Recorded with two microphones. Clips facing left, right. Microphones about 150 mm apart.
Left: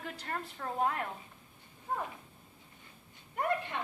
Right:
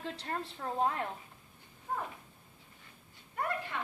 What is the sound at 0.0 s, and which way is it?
A woman's voice, 25° right (ahead or behind).